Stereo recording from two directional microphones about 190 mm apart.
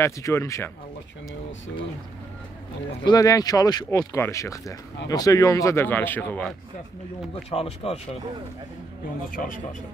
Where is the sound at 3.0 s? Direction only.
20° left (ahead or behind).